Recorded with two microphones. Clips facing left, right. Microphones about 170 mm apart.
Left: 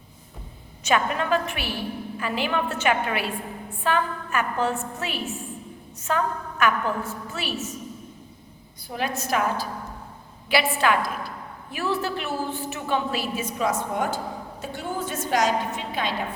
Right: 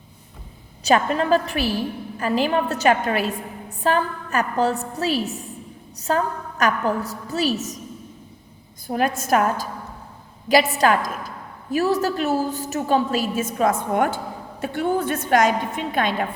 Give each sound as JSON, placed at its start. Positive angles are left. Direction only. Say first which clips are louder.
{"t": 0.9, "sound": "a woman's voice", "louder": "right 5 dB", "side_deg": -35}
{"t": 8.9, "sound": "a woman's voice", "louder": "right 6 dB", "side_deg": -50}